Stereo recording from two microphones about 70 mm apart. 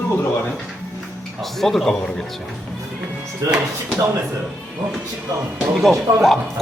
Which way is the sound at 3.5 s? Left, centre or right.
Centre.